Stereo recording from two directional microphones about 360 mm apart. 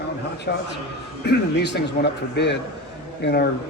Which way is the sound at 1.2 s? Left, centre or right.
Left.